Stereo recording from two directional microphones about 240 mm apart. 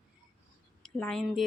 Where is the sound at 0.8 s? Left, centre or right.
Centre.